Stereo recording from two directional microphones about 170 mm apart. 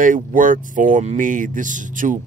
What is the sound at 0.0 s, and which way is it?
Speech, 50° right (ahead or behind).